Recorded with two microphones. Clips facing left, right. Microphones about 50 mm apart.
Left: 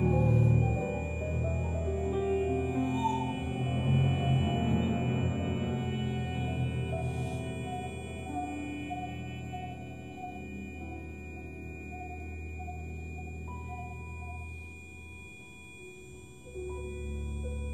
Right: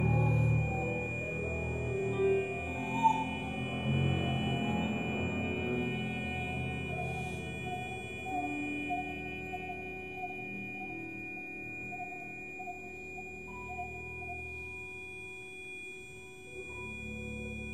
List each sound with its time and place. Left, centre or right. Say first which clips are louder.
0.0 s music: left 3 dB; centre
1.2 s music: left 1 dB; right
2.0 s music: even; centre; by 3.2 s right
3.2 s music: left 2 dB; centre
6.9 s music: left 1 dB; centre